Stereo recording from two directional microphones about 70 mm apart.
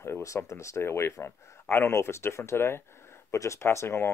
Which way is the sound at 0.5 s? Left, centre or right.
Left.